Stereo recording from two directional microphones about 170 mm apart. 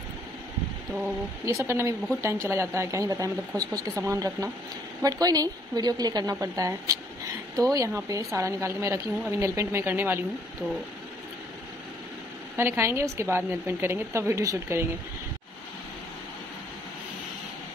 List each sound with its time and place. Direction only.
1.4 s a woman's voice: 15° right (ahead or behind)
12.5 s a woman's voice: 15° right (ahead or behind)